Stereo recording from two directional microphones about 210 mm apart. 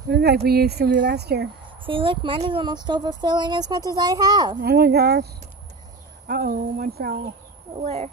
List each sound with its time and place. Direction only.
0.1 s speech: 50° right (ahead or behind)
1.9 s speech: 25° right (ahead or behind)
4.6 s speech: 50° right (ahead or behind)
7.8 s speech: 35° right (ahead or behind)